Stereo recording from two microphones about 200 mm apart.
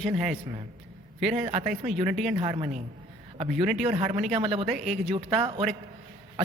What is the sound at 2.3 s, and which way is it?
Speech, 35° right (ahead or behind).